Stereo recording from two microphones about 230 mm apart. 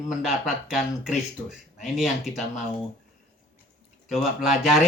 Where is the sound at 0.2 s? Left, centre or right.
Centre.